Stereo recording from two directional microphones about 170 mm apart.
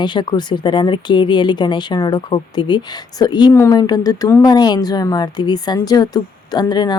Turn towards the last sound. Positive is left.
turn(degrees=25)  # may be behind; listen again after turning